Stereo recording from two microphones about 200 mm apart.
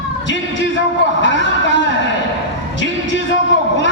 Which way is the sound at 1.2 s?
65° left (ahead or behind).